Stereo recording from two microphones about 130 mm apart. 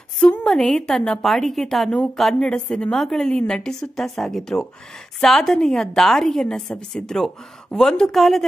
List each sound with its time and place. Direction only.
0.2 s a woman's voice: 5° left (ahead or behind)